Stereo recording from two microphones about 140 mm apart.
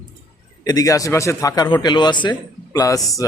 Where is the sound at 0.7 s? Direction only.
25° left (ahead or behind).